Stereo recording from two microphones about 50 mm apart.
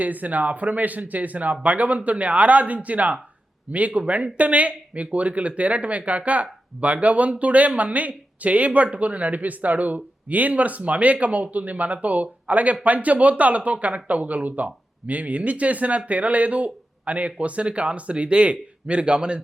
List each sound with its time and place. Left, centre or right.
0.0 s speech: right